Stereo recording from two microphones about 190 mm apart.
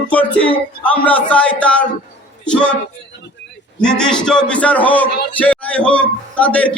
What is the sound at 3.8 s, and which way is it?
A man's voice, 5° left (ahead or behind).